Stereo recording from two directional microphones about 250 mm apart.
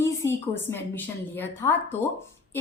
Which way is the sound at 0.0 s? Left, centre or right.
Centre.